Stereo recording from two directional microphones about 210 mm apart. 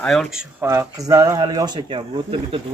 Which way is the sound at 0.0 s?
Centre (ahead or behind).